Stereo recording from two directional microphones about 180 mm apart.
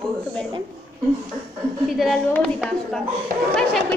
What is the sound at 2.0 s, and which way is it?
A woman's voice, 5° left (ahead or behind).